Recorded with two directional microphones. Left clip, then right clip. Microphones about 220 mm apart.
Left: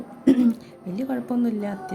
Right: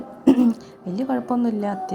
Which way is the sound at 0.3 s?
Centre (ahead or behind).